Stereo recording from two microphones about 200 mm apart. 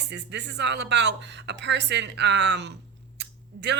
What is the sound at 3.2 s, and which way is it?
Scissors, 60° right (ahead or behind).